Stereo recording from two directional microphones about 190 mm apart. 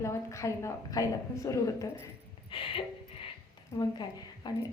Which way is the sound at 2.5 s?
25° left (ahead or behind).